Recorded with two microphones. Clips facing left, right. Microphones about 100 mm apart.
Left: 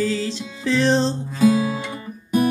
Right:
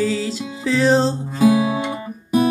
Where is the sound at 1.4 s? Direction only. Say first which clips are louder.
Right 2 dB; 20° right (ahead or behind).